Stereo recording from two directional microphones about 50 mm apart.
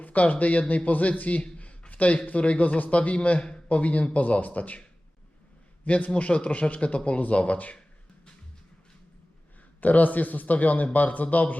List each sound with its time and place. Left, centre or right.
0.0 s a man's voice: left
5.8 s a man's voice: left
9.8 s a man's voice: left